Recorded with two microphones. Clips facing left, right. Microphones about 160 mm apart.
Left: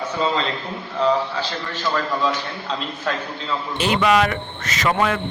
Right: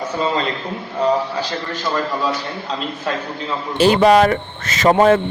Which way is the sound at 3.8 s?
35° right (ahead or behind).